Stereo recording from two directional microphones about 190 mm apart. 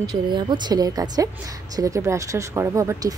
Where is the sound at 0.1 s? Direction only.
20° right (ahead or behind).